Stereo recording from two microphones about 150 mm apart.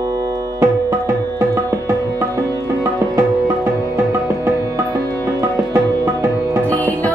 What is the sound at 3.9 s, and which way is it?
Music, 20° right (ahead or behind).